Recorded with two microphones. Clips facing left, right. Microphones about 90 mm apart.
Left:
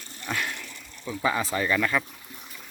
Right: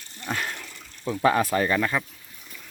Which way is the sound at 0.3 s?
40° right (ahead or behind).